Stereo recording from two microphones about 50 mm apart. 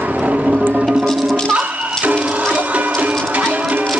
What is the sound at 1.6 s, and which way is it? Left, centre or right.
Music, right.